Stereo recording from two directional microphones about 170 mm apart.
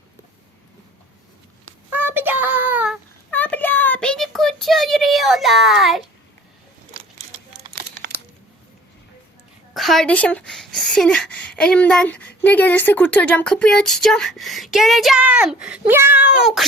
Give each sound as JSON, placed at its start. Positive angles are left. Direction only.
{"t": 1.9, "sound": "child singing", "side_deg": -10}
{"t": 3.2, "sound": "a sound", "side_deg": 10}
{"t": 4.6, "sound": "a child's voice", "side_deg": 0}
{"t": 7.8, "sound": "crumpling", "side_deg": -70}
{"t": 9.7, "sound": "speech", "side_deg": 0}